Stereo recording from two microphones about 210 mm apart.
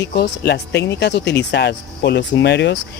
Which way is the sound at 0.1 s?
50° left (ahead or behind).